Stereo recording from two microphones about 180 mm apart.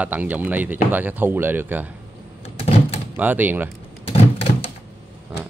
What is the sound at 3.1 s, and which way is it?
Speech, 10° right (ahead or behind).